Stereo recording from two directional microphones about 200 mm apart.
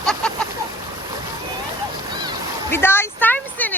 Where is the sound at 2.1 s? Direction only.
20° right (ahead or behind).